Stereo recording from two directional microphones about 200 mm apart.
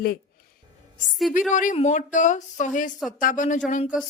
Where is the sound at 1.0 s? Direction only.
Centre (ahead or behind).